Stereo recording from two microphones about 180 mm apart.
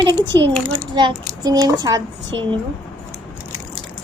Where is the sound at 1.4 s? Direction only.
25° right (ahead or behind).